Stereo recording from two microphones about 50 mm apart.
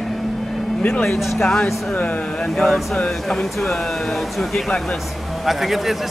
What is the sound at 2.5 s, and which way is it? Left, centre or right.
Speech, centre.